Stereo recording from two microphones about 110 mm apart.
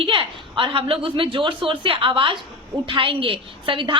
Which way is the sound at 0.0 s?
55° right (ahead or behind).